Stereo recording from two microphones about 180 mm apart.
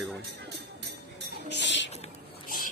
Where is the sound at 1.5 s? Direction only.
80° left.